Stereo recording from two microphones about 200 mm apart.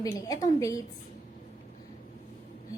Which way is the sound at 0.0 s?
20° left (ahead or behind).